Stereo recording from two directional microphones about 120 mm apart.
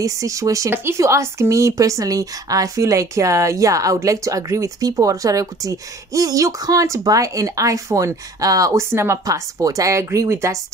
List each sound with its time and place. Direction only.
0.0 s speech: 25° right (ahead or behind)